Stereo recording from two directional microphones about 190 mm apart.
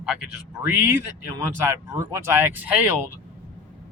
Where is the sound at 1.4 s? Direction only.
15° right (ahead or behind).